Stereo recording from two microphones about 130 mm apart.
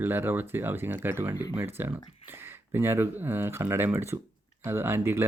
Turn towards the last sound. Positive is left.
turn(degrees=-15)  # may be behind; listen again after turning